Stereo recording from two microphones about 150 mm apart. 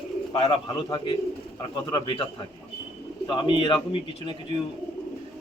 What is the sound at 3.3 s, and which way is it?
A man's voice, 35° left (ahead or behind).